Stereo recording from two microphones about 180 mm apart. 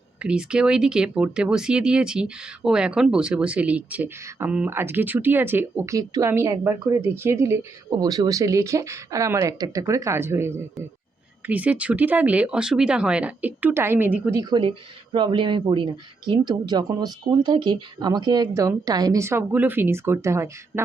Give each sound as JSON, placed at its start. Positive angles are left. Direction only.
{"t": 0.2, "sound": "speech", "side_deg": -5}
{"t": 14.5, "sound": "speech", "side_deg": -25}